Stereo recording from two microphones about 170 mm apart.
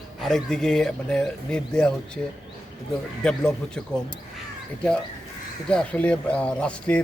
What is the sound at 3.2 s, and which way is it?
Speech, 5° left (ahead or behind).